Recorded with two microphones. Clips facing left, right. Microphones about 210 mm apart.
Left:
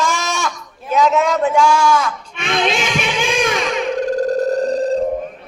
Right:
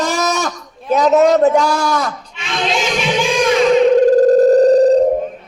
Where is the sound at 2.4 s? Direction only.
55° left (ahead or behind).